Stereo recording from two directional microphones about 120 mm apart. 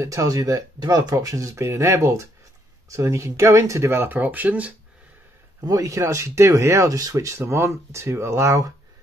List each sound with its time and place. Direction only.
0.0 s speech: 25° right (ahead or behind)
5.7 s speech: 25° right (ahead or behind)